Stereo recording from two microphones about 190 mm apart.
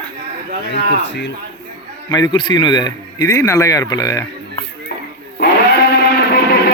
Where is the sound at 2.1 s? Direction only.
20° left (ahead or behind).